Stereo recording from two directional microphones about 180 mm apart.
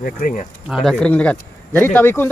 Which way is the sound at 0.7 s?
Centre (ahead or behind).